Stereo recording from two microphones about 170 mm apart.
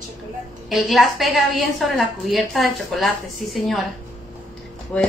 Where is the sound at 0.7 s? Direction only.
Centre (ahead or behind).